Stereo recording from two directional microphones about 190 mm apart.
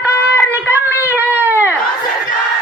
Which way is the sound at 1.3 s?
10° right (ahead or behind).